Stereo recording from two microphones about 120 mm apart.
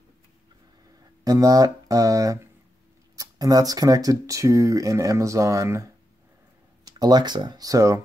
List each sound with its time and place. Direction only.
1.2 s speech: 30° right (ahead or behind)